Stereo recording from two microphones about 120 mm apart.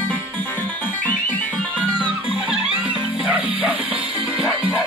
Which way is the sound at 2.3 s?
5° right (ahead or behind).